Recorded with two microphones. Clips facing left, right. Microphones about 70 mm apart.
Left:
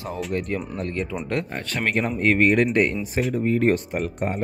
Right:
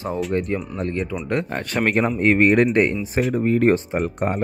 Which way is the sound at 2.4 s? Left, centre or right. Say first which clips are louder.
Right 3 dB; right.